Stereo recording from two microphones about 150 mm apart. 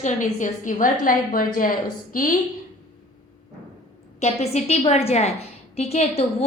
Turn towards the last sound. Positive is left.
turn(degrees=45)  # may be behind; listen again after turning